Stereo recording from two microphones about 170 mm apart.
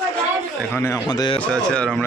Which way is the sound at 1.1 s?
25° left (ahead or behind).